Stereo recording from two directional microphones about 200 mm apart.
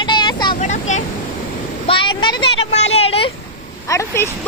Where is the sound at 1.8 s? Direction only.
25° left (ahead or behind).